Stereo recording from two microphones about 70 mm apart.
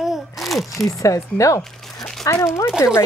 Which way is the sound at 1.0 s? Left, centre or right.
Left.